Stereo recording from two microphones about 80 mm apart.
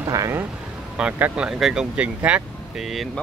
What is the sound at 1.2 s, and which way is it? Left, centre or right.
Speech, centre.